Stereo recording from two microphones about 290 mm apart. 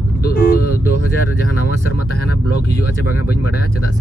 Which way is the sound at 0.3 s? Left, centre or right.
Left.